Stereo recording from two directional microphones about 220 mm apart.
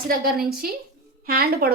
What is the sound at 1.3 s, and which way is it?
Speech, 45° right (ahead or behind).